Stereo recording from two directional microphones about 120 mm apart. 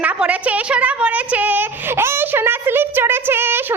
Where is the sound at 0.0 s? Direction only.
10° right (ahead or behind).